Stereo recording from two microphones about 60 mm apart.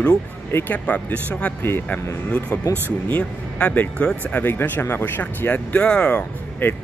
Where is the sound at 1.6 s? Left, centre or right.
Left.